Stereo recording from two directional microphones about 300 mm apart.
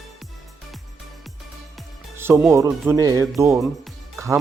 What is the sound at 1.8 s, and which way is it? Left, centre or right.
Music, centre.